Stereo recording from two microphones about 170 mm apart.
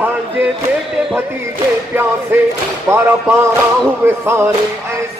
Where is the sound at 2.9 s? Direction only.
15° right (ahead or behind).